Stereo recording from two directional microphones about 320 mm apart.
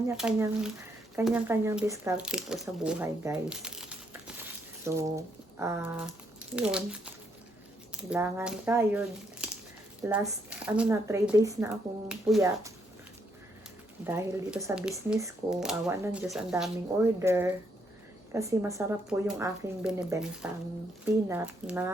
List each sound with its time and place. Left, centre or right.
0.2 s speech: centre
8.1 s speech: centre
14.0 s speech: centre